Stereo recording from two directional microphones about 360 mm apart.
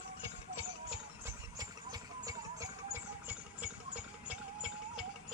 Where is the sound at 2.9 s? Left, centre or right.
Centre.